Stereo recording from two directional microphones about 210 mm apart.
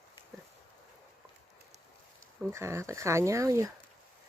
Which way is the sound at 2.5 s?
15° right (ahead or behind).